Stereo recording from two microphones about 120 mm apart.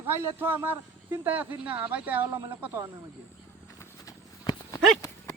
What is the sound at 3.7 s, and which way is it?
Horse, 30° left (ahead or behind).